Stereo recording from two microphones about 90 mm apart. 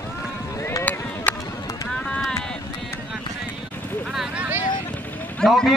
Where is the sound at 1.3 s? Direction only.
20° left (ahead or behind).